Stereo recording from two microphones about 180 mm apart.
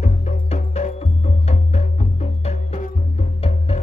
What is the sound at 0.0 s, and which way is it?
Music, 40° left (ahead or behind).